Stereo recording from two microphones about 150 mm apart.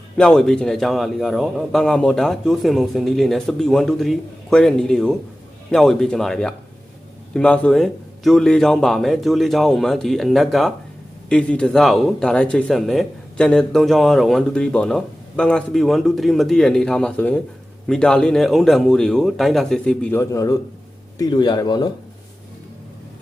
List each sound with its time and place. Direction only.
0.2 s speech: 5° left (ahead or behind)
20.3 s speech: 20° left (ahead or behind)